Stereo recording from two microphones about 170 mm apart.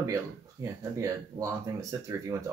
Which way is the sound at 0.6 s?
20° right (ahead or behind).